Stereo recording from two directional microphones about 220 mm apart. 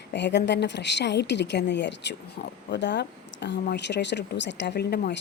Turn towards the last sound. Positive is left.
turn(degrees=50)  # may be behind; listen again after turning